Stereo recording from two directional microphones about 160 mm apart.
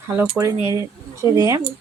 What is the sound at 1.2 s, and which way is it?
Speech, 20° right (ahead or behind).